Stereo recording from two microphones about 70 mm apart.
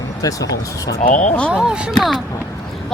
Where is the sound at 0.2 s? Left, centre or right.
Left.